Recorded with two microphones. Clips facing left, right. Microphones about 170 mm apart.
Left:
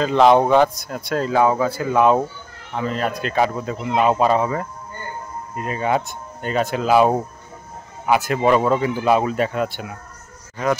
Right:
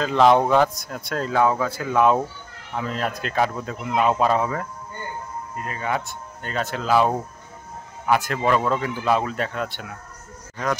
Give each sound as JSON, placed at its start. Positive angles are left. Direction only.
{"t": 0.0, "sound": "speech", "side_deg": 0}
{"t": 5.6, "sound": "speech", "side_deg": 20}